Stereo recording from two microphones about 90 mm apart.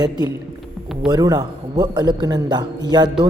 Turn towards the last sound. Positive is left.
turn(degrees=-55)  # may be behind; listen again after turning